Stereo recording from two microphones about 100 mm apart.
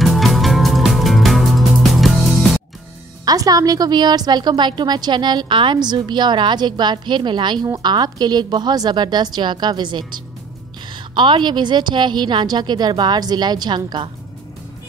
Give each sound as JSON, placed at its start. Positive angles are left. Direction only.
{"t": 0.0, "sound": "music", "side_deg": 0}
{"t": 3.3, "sound": "a woman's voice", "side_deg": -40}